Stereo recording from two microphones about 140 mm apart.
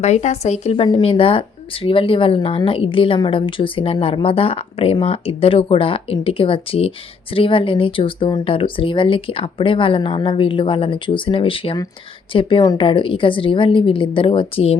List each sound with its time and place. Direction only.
0.0 s a woman's voice: 55° left (ahead or behind)
0.9 s speech: 35° left (ahead or behind)